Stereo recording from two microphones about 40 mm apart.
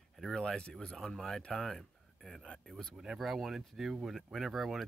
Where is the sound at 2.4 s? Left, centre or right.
Left.